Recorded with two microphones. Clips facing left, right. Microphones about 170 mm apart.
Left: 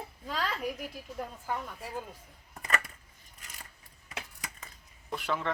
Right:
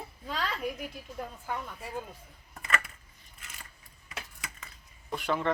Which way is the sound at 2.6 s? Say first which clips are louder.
Even; 40° left (ahead or behind).